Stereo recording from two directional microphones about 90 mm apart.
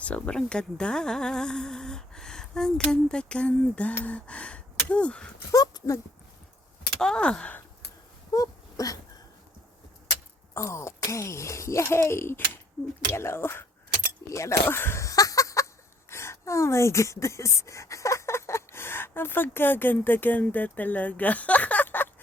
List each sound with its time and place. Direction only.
0.0 s speech: 15° left (ahead or behind)
5.5 s dog: 45° left (ahead or behind)
7.0 s speech: 10° left (ahead or behind)
8.3 s wail: 40° left (ahead or behind)
10.5 s speech: 30° left (ahead or behind)